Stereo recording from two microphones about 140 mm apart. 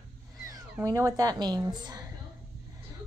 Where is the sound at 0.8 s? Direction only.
25° right (ahead or behind).